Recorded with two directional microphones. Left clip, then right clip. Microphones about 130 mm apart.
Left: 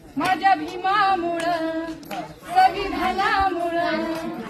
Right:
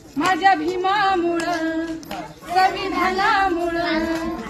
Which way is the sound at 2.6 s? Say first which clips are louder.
Right 1 dB; centre (ahead or behind).